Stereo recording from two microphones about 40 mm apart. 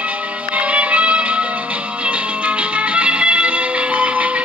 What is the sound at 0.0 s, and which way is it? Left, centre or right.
Music, right.